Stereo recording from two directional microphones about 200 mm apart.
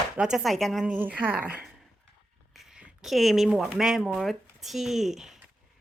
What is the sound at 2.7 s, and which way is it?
Speech, centre (ahead or behind).